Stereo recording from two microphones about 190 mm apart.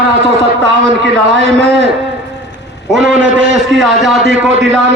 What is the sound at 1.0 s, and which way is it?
Speech, 70° right (ahead or behind).